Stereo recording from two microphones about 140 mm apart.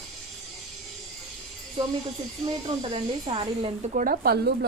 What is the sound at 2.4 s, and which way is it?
Speech, 30° right (ahead or behind).